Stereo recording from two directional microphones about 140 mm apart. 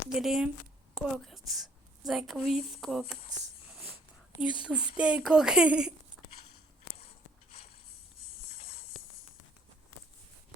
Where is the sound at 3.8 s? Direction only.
20° right (ahead or behind).